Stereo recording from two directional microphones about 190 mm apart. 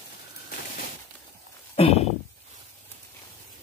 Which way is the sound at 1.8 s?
30° left (ahead or behind).